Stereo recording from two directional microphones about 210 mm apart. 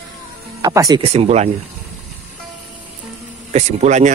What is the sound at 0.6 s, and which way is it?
Speech, 15° right (ahead or behind).